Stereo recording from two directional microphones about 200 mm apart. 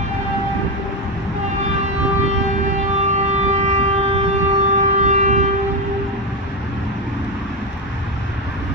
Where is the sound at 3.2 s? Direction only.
35° right (ahead or behind).